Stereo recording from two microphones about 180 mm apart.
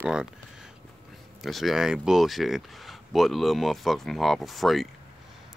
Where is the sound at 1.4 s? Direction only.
Centre (ahead or behind).